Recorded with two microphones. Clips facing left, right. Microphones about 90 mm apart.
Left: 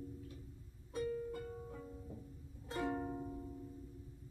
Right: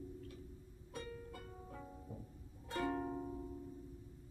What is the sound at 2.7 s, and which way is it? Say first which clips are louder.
Music: even; 5° left (ahead or behind).